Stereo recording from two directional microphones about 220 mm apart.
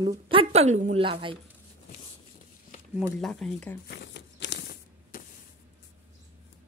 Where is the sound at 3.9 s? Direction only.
50° left (ahead or behind).